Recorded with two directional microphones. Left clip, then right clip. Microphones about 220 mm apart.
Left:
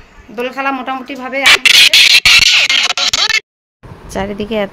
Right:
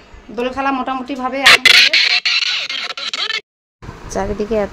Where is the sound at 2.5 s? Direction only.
15° left (ahead or behind).